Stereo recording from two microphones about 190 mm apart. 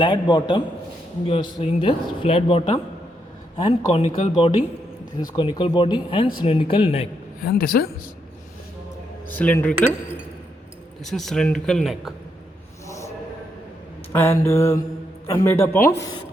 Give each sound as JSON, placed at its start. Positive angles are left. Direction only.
{"t": 0.0, "sound": "speech", "side_deg": 25}
{"t": 7.4, "sound": "speech", "side_deg": 50}
{"t": 9.3, "sound": "mantra", "side_deg": 10}
{"t": 11.0, "sound": "speech", "side_deg": 0}
{"t": 14.1, "sound": "mantra", "side_deg": 10}